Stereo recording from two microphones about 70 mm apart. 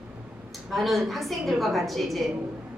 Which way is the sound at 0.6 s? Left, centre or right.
Centre.